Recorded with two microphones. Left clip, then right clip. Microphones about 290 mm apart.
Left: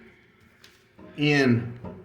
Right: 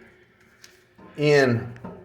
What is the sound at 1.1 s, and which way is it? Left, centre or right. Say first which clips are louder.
Speech: right 4 dB; centre.